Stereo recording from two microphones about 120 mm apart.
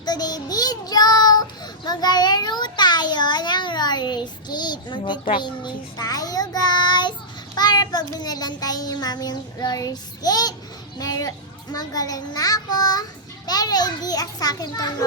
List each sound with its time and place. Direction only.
0.0 s child singing: 35° left (ahead or behind)